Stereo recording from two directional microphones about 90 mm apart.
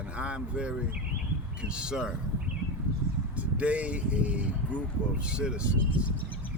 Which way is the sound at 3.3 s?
15° right (ahead or behind).